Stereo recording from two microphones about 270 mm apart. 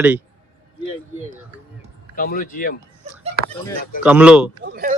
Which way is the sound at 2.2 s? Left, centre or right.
Left.